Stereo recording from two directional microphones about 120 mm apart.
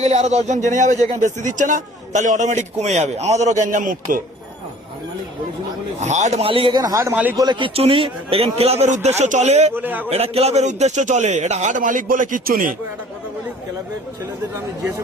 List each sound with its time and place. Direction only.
0.0 s a man's voice: 70° right (ahead or behind); by 4.2 s 90° right
6.0 s speech: 80° right
6.4 s speech: 50° right (ahead or behind)
6.8 s a man's voice: 30° right (ahead or behind)
7.7 s a man's voice: 50° right (ahead or behind); by 9.7 s 70° right (ahead or behind)
9.7 s a man's voice: 15° right (ahead or behind)
10.1 s a man's voice: 60° right (ahead or behind); by 12.7 s 90° right